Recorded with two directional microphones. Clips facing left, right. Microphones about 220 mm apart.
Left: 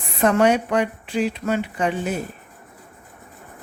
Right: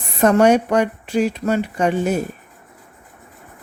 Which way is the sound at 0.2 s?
45° right (ahead or behind).